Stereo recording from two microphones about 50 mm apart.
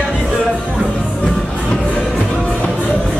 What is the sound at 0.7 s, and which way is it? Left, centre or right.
Music, centre.